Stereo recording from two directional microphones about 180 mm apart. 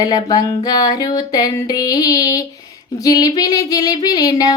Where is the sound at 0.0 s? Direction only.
20° left (ahead or behind).